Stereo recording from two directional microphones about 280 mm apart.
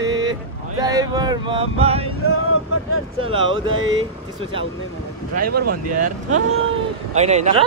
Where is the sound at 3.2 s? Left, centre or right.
Centre.